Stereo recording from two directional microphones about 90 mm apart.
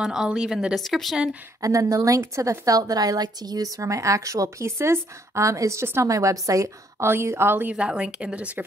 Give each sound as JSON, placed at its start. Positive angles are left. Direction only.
{"t": 0.0, "sound": "speech", "side_deg": -5}
{"t": 1.6, "sound": "a woman's voice", "side_deg": -40}
{"t": 7.7, "sound": "speech", "side_deg": -5}